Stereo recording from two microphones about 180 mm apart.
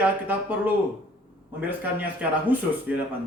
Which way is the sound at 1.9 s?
10° right (ahead or behind).